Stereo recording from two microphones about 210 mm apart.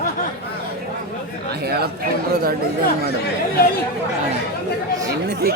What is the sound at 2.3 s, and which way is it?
Speech, 50° right (ahead or behind).